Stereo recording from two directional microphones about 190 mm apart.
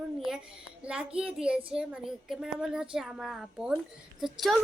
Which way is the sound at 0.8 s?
5° right (ahead or behind).